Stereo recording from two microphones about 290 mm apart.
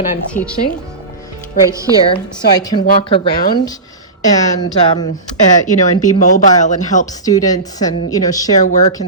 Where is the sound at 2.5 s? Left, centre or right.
Centre.